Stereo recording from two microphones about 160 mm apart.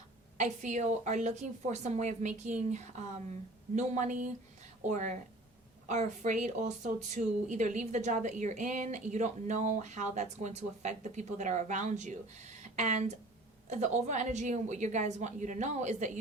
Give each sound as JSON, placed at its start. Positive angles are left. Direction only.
{"t": 0.3, "sound": "a woman's voice", "side_deg": -50}